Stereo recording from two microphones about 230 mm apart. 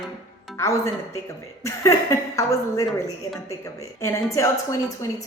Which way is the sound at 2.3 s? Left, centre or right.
Centre.